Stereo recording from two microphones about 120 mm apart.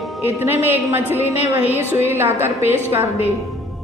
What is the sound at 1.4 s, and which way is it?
Music, 60° left (ahead or behind).